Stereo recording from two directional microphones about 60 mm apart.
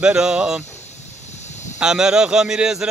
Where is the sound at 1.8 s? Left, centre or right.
Centre.